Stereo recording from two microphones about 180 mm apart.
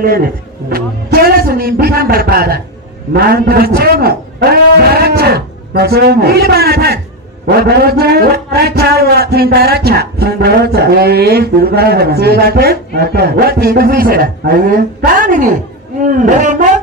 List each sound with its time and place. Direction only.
0.7 s a man's voice: 55° right (ahead or behind)